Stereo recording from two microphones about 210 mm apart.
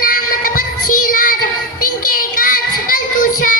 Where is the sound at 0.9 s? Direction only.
40° left (ahead or behind).